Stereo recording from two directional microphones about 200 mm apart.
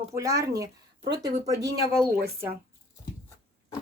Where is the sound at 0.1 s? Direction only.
15° right (ahead or behind).